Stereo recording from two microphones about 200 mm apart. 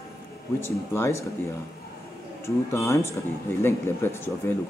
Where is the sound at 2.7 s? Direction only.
15° left (ahead or behind).